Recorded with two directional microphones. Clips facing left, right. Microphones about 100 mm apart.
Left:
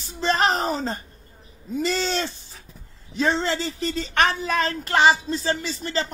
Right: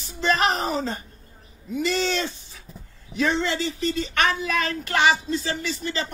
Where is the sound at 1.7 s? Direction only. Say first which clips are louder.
Even; 35° left (ahead or behind).